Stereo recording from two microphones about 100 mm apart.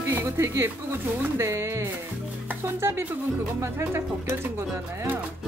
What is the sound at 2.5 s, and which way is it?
Music, 25° right (ahead or behind).